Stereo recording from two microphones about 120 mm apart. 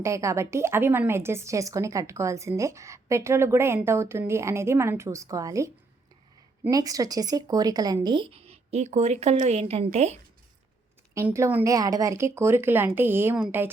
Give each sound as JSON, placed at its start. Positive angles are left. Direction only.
{"t": 0.0, "sound": "a woman's voice", "side_deg": -25}
{"t": 8.0, "sound": "a woman's voice", "side_deg": -45}
{"t": 11.3, "sound": "a woman's voice", "side_deg": -25}